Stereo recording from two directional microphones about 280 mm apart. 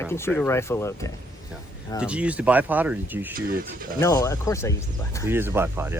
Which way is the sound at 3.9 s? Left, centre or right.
Centre.